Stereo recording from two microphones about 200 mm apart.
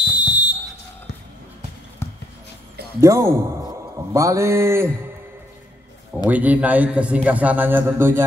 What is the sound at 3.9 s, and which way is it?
Mantra, 15° right (ahead or behind).